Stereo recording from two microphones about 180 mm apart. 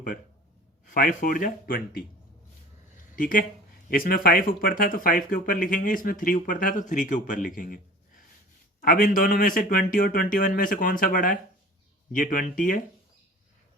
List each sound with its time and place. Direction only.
0.9 s speech: 45° left (ahead or behind)
3.2 s speech: 50° left (ahead or behind)
8.8 s speech: 55° left (ahead or behind)